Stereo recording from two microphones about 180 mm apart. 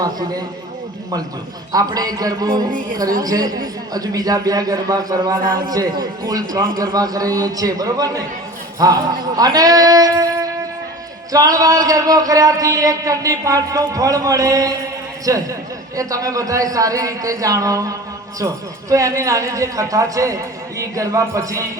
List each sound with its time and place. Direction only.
0.0 s a man's voice: 20° right (ahead or behind)
1.7 s a man's voice: 20° right (ahead or behind)
5.4 s a man's voice: 50° right (ahead or behind)
5.7 s a man's voice: 20° right (ahead or behind)